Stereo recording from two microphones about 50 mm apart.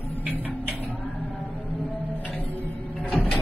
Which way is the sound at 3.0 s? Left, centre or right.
Left.